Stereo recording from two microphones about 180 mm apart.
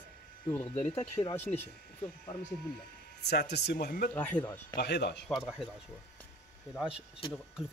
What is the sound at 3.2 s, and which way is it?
Speech, 65° left (ahead or behind).